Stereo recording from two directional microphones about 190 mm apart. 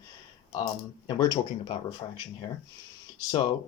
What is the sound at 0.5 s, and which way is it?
Speech, 20° left (ahead or behind).